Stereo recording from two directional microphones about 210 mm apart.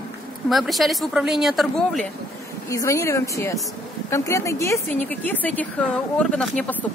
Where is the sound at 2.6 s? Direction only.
15° left (ahead or behind).